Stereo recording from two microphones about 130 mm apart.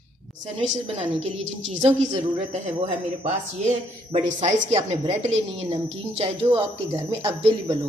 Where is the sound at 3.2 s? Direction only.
60° right (ahead or behind).